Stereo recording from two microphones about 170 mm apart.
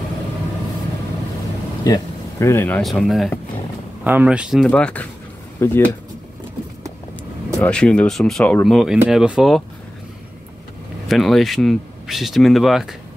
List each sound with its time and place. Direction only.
1.9 s speech: 15° left (ahead or behind)
2.8 s speech: centre (ahead or behind)
4.6 s speech: 5° left (ahead or behind)
7.6 s speech: 5° left (ahead or behind)
11.1 s speech: centre (ahead or behind)